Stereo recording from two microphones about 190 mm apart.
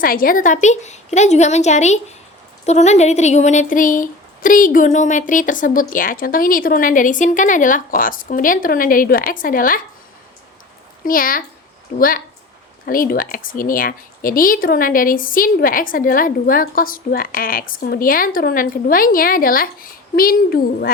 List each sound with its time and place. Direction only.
0.0 s a woman's voice: 50° left (ahead or behind)
11.0 s speech: 45° left (ahead or behind)